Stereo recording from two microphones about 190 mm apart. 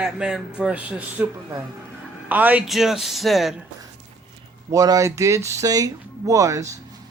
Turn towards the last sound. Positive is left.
turn(degrees=-15)  # may be behind; listen again after turning